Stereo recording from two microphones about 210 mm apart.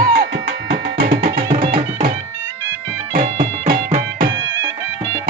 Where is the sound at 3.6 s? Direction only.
35° right (ahead or behind).